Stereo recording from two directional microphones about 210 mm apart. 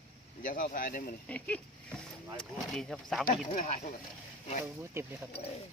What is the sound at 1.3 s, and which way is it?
Speech, 5° left (ahead or behind).